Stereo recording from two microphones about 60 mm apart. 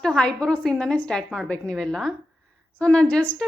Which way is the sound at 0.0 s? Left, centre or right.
Centre.